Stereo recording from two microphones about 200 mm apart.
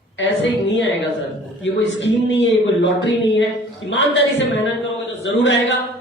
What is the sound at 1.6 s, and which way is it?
A man's voice, 65° left (ahead or behind).